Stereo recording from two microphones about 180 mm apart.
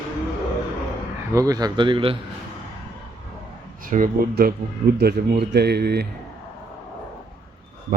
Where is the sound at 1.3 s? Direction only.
20° right (ahead or behind).